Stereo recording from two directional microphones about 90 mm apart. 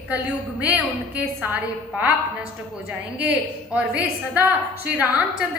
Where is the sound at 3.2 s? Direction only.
15° right (ahead or behind).